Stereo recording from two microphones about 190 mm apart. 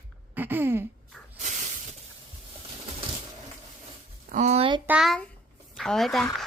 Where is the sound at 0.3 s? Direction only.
10° right (ahead or behind).